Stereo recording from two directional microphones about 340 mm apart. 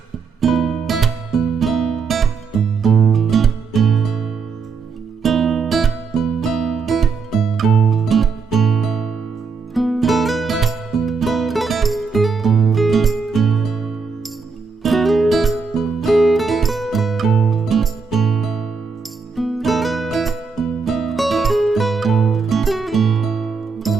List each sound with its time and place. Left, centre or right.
0.4 s music: centre